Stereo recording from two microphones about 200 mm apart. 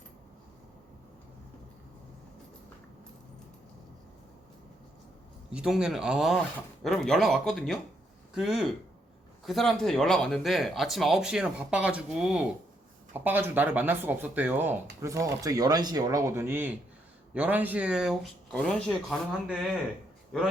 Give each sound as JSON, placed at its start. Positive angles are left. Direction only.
{"t": 5.5, "sound": "speech", "side_deg": -5}